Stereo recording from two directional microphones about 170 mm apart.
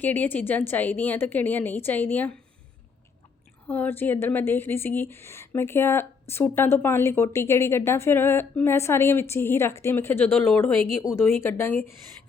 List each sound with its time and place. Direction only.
0.0 s a woman's voice: 10° left (ahead or behind)
3.7 s a woman's voice: 10° left (ahead or behind)